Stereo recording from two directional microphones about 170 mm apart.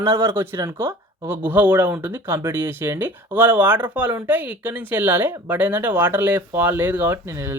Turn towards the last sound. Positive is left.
turn(degrees=-15)  # may be behind; listen again after turning